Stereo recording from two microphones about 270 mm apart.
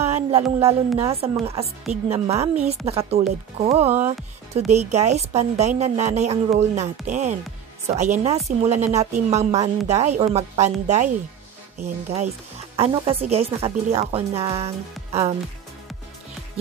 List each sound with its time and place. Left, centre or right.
0.0 s a woman's voice: right